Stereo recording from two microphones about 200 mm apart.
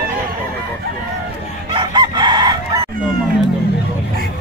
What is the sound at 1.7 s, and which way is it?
Chicken, 25° right (ahead or behind).